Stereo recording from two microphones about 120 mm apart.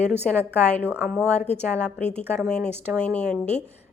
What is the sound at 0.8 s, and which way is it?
Speech, 15° right (ahead or behind).